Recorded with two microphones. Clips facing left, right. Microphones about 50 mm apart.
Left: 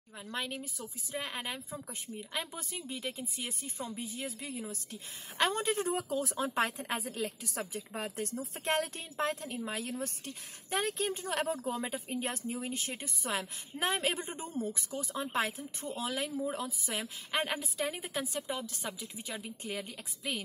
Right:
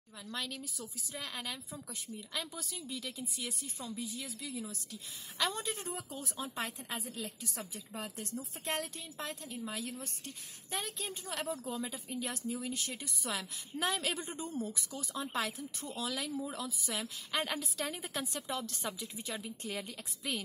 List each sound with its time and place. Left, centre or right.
0.3 s a woman's voice: left
18.1 s a woman's voice: centre